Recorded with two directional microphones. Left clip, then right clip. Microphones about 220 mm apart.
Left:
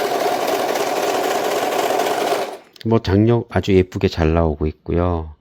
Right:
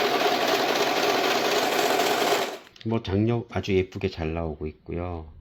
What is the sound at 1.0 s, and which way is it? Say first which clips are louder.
Sewing machine: left 4 dB; 15° left (ahead or behind).